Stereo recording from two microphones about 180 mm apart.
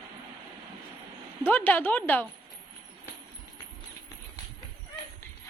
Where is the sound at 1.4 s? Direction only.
10° left (ahead or behind).